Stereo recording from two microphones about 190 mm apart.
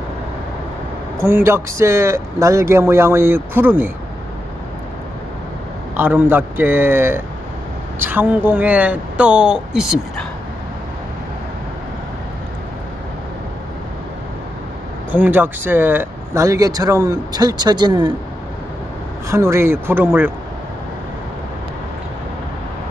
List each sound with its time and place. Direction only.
1.1 s speech: 15° right (ahead or behind)
5.9 s speech: 10° right (ahead or behind)
15.0 s speech: 10° right (ahead or behind)
19.2 s speech: 15° right (ahead or behind)